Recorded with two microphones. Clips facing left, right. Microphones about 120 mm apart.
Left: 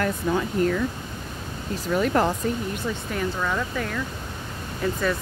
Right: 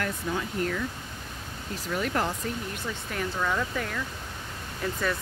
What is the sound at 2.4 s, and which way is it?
Speech, 25° left (ahead or behind).